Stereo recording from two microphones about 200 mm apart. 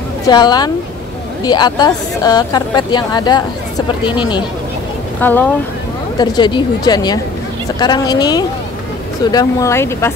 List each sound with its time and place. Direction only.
0.3 s speech: 20° left (ahead or behind)
5.2 s speech: 10° left (ahead or behind)
6.1 s speech: 20° left (ahead or behind)